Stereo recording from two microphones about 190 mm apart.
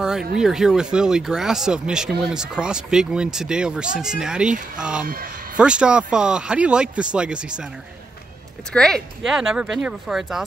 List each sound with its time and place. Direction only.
0.4 s speech: centre (ahead or behind)
5.0 s speech: 50° right (ahead or behind)
5.6 s speech: 5° right (ahead or behind)
8.7 s speech: 5° left (ahead or behind)